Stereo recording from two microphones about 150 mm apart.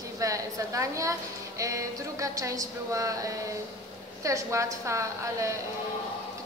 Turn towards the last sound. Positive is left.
turn(degrees=-20)  # may be behind; listen again after turning